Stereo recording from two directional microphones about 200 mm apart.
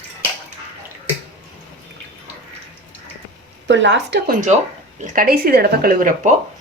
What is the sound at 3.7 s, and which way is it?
Speech, 65° right (ahead or behind).